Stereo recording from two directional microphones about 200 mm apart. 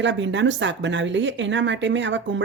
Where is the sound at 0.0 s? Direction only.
65° right (ahead or behind).